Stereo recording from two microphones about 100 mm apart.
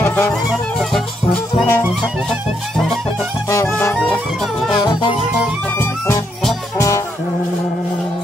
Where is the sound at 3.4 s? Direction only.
30° left (ahead or behind).